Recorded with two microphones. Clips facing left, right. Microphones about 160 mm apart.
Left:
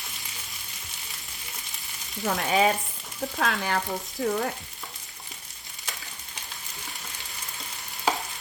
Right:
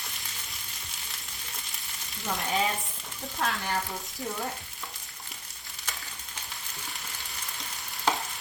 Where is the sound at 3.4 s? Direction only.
75° left (ahead or behind).